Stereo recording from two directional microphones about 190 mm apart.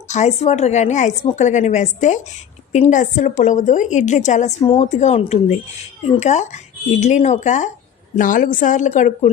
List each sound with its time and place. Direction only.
0.1 s a woman's voice: 35° left (ahead or behind)